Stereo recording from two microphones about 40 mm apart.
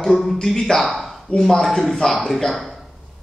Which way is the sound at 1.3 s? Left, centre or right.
Left.